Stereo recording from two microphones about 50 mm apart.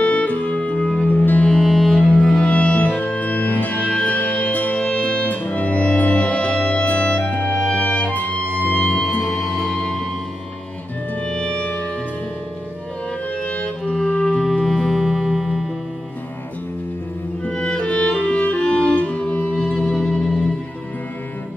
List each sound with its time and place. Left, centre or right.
0.0 s music: left
1.0 s music: left
1.6 s music: centre
2.0 s music: left
9.2 s music: centre
11.2 s music: centre
13.4 s music: left
14.6 s music: centre
17.5 s music: centre
19.8 s music: centre